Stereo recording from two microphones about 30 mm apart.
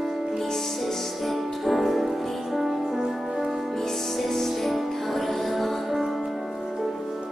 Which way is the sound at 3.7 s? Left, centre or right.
Centre.